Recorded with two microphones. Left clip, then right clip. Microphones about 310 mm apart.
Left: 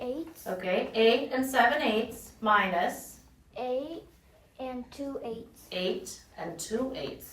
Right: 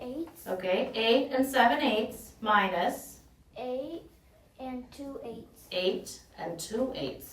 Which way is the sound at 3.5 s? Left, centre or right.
Left.